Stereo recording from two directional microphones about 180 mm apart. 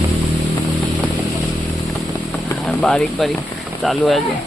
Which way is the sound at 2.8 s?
5° left (ahead or behind).